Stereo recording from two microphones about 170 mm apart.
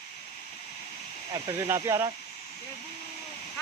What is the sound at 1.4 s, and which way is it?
Speech, 15° right (ahead or behind).